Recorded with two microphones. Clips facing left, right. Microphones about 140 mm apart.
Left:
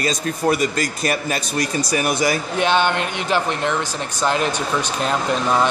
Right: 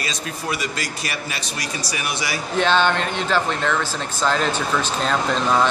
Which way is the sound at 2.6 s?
15° left (ahead or behind).